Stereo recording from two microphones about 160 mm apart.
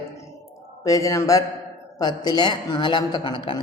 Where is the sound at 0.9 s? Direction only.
20° left (ahead or behind).